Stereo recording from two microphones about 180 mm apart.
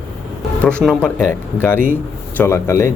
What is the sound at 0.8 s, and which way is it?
Speech, 5° left (ahead or behind).